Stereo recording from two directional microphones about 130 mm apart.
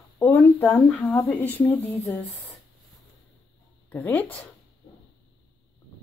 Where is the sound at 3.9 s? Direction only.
15° left (ahead or behind).